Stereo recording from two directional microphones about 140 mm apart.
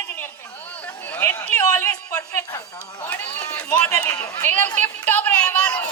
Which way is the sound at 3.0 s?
10° left (ahead or behind).